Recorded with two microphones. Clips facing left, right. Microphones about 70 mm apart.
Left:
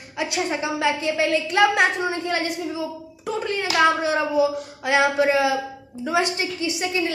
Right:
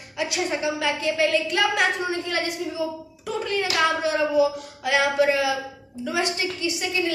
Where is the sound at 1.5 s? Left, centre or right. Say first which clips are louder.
Left 9 dB; left.